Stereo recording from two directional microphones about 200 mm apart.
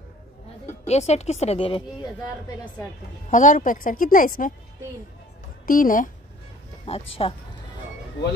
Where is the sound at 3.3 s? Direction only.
40° left (ahead or behind).